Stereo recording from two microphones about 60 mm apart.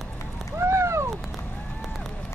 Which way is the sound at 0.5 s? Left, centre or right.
Right.